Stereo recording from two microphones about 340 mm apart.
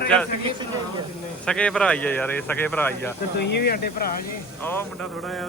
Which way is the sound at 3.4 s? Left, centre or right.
Left.